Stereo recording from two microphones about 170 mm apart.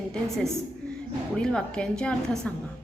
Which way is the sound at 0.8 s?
5° left (ahead or behind).